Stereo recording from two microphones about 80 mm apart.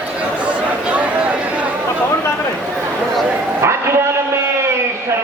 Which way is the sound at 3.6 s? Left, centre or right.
Right.